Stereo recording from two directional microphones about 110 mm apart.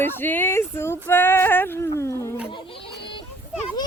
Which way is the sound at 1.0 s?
20° left (ahead or behind).